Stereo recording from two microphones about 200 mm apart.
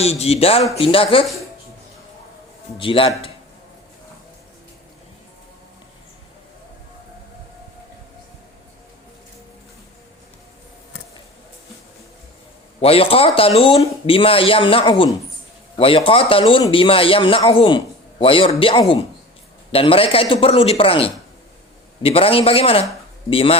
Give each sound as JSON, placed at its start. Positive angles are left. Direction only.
{"t": 0.0, "sound": "speech", "side_deg": 30}
{"t": 2.7, "sound": "speech", "side_deg": 25}
{"t": 12.8, "sound": "speech", "side_deg": 30}